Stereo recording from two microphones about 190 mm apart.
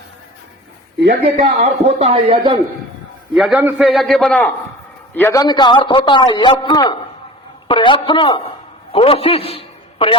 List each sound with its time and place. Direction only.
1.4 s speech: 35° right (ahead or behind)
3.3 s a man's voice: centre (ahead or behind); by 10.2 s 30° left (ahead or behind)